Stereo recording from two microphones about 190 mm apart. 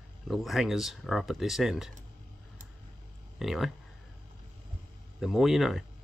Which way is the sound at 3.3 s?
Centre (ahead or behind).